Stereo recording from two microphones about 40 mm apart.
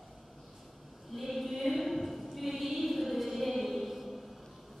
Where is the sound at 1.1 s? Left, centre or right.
Centre.